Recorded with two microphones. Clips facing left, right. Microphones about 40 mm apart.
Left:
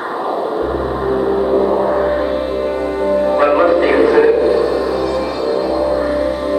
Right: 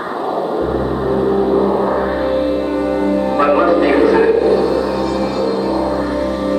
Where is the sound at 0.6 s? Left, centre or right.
Centre.